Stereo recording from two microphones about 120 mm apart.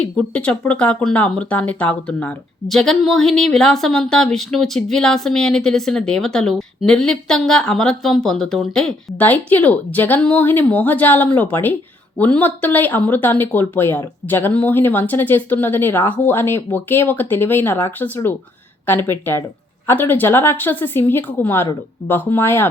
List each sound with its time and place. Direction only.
0.0 s a woman's voice: 10° left (ahead or behind)